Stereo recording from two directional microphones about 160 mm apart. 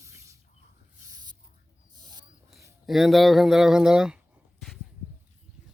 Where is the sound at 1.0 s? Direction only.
25° right (ahead or behind).